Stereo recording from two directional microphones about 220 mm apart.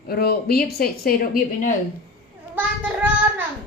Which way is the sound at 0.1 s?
45° left (ahead or behind).